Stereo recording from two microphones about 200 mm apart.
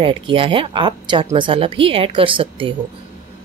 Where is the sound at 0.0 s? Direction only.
25° right (ahead or behind).